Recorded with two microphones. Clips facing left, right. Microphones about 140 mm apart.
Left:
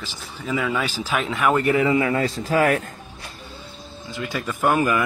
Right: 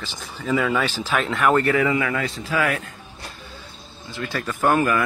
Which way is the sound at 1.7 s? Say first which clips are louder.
Left 2 dB; 25° left (ahead or behind).